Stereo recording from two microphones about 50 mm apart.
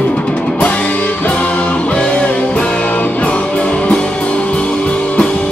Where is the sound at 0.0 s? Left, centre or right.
Left.